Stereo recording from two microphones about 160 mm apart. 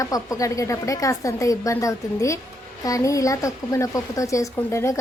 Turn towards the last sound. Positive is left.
turn(degrees=20)  # may be behind; listen again after turning